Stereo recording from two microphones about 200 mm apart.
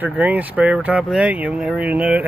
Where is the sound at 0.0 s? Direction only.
10° right (ahead or behind).